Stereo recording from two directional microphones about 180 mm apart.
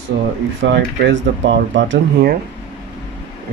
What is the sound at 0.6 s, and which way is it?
Speech, 80° right.